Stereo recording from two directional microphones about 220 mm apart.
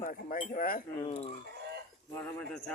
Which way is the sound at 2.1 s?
5° left (ahead or behind).